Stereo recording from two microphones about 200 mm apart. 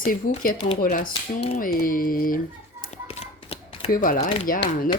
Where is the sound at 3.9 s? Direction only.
45° left (ahead or behind).